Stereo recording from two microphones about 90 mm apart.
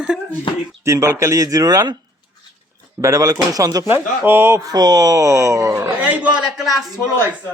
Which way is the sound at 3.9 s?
25° right (ahead or behind).